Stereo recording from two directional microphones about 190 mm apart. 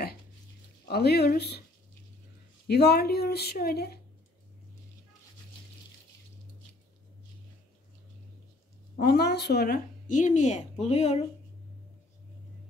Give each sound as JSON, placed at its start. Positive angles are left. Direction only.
{"t": 0.8, "sound": "speech", "side_deg": 60}
{"t": 2.7, "sound": "speech", "side_deg": 60}
{"t": 9.0, "sound": "speech", "side_deg": 55}